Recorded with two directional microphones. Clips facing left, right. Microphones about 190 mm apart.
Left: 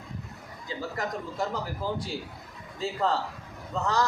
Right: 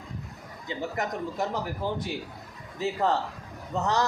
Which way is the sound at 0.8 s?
20° right (ahead or behind).